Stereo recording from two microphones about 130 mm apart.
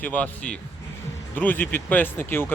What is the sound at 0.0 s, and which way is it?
Speech, 10° left (ahead or behind).